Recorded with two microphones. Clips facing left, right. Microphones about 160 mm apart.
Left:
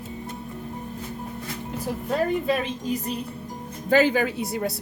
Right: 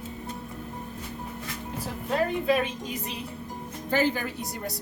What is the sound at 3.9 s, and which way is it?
Speech, 85° left.